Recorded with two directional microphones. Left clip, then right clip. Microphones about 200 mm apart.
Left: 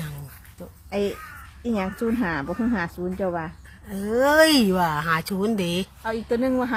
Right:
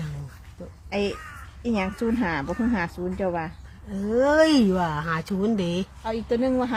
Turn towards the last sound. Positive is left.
turn(degrees=25)  # may be behind; listen again after turning